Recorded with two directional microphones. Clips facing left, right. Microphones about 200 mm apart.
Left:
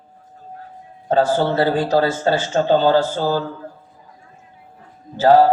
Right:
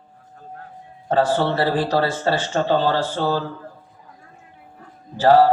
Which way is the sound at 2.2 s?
25° left (ahead or behind).